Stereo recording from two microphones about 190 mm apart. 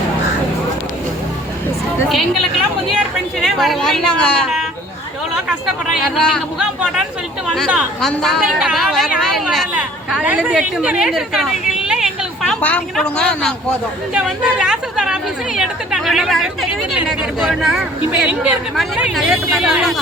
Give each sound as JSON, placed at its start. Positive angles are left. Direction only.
{"t": 2.0, "sound": "a woman's voice", "side_deg": 0}
{"t": 5.9, "sound": "a woman's voice", "side_deg": 0}